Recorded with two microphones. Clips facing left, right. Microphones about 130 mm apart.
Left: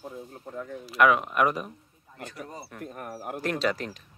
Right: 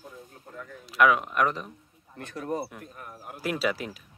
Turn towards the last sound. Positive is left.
turn(degrees=-5)  # may be behind; listen again after turning